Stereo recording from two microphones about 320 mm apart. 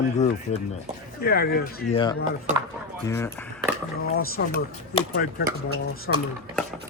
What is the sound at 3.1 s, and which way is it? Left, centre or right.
Speech, centre.